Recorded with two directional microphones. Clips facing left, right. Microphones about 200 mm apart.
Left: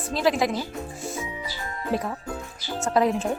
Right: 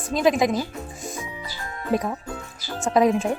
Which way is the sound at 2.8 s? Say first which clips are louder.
Right 3 dB; 15° right (ahead or behind).